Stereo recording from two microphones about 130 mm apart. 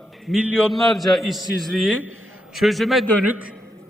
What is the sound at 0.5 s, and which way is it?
A man's voice, 5° left (ahead or behind).